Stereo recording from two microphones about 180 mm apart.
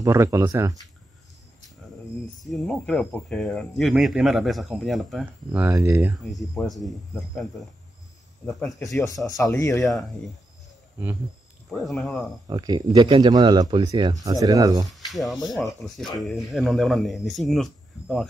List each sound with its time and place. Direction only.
0.0 s speech: 15° right (ahead or behind)
2.4 s speech: centre (ahead or behind); by 6.1 s 15° right (ahead or behind)
6.3 s speech: centre (ahead or behind)
8.5 s speech: 5° left (ahead or behind)
9.4 s speech: 15° left (ahead or behind)
9.8 s speech: centre (ahead or behind)
11.7 s speech: centre (ahead or behind)
12.4 s a man's voice: 20° right (ahead or behind)
15.0 s speech: centre (ahead or behind)